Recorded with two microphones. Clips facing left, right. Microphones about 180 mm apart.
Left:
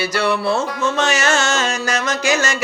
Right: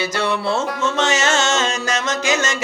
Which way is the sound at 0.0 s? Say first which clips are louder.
Left 2 dB; 20° right (ahead or behind).